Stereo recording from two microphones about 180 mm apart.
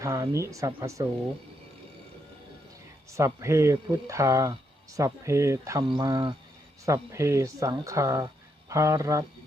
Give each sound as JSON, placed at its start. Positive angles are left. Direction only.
{"t": 0.0, "sound": "speech", "side_deg": -15}
{"t": 3.1, "sound": "speech", "side_deg": -15}